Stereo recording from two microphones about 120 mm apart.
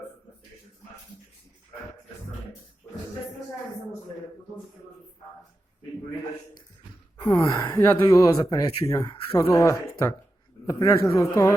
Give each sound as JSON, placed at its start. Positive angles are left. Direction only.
{"t": 7.2, "sound": "speech", "side_deg": 30}